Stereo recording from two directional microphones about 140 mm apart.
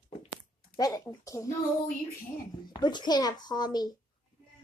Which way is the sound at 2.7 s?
30° left (ahead or behind).